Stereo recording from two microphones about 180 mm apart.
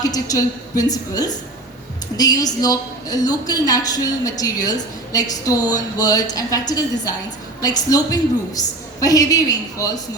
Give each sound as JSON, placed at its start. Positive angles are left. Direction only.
{"t": 0.0, "sound": "a woman's voice", "side_deg": 20}